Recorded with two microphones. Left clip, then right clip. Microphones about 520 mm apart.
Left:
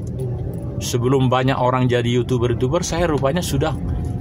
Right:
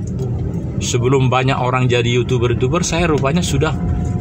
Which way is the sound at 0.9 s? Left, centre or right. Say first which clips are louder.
Right 2 dB; left.